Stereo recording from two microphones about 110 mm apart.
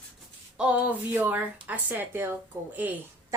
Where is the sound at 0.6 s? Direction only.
10° right (ahead or behind).